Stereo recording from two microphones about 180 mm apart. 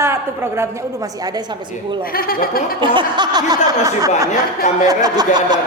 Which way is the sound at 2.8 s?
25° right (ahead or behind).